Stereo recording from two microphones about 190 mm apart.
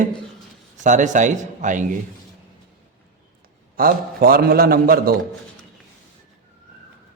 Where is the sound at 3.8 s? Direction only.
50° right (ahead or behind).